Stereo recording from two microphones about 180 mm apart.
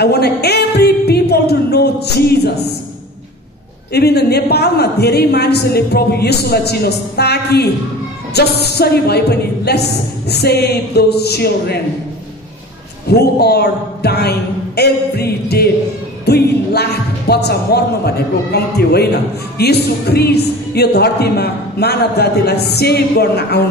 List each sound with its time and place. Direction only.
0.0 s a woman's voice: 65° left (ahead or behind)
3.9 s a woman's voice: 65° left (ahead or behind)
13.1 s a woman's voice: 65° left (ahead or behind)